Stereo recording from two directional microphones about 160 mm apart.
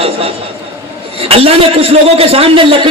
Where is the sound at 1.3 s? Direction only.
35° right (ahead or behind).